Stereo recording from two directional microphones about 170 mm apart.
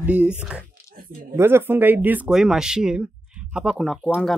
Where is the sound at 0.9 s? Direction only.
60° right (ahead or behind).